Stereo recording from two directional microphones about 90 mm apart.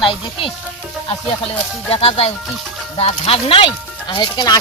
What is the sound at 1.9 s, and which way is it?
Speech, 90° left.